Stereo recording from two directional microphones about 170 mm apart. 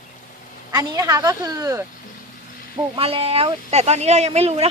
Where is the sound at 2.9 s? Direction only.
35° right (ahead or behind).